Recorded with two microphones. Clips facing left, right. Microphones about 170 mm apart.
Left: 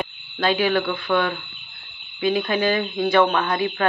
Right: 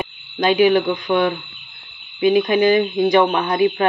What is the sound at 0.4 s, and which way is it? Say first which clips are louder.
Speech: right 6 dB; 15° right (ahead or behind).